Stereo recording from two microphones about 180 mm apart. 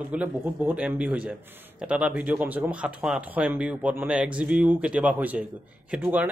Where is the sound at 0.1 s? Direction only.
10° right (ahead or behind).